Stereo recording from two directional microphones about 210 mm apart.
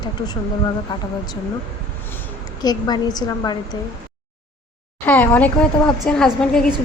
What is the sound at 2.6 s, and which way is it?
A woman's voice, 20° left (ahead or behind).